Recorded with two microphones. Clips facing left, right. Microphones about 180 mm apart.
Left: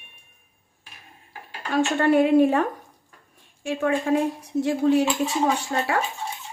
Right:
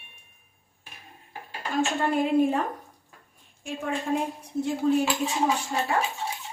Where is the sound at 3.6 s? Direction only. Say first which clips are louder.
Left 7 dB; 75° left (ahead or behind).